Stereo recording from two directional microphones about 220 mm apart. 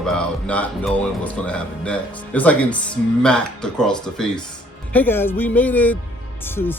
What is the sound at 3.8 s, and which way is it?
Speech, 5° left (ahead or behind).